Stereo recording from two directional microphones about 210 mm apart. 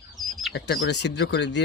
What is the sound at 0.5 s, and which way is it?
Speech, 55° left (ahead or behind).